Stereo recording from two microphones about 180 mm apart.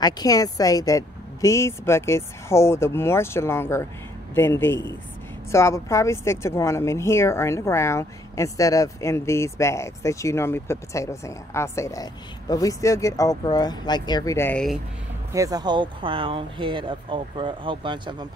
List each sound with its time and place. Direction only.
0.0 s speech: 20° left (ahead or behind)
15.3 s speech: 20° right (ahead or behind)